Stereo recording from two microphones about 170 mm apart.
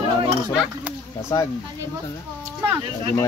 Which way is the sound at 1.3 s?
20° left (ahead or behind).